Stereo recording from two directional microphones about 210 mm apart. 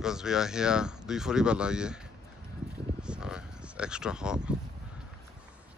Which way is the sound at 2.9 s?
5° right (ahead or behind).